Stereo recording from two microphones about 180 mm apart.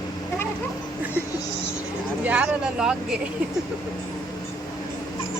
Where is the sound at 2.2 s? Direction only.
5° right (ahead or behind).